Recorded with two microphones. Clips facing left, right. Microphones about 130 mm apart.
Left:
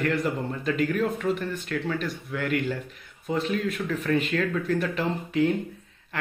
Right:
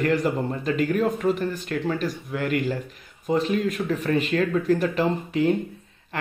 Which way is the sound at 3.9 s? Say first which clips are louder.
Right 1 dB; 35° right (ahead or behind).